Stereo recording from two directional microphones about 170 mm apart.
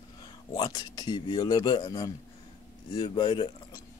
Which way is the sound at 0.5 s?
25° left (ahead or behind).